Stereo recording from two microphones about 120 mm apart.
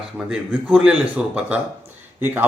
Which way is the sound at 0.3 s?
5° right (ahead or behind).